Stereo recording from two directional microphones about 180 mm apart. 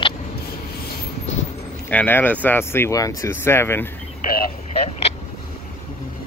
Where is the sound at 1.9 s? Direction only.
10° left (ahead or behind).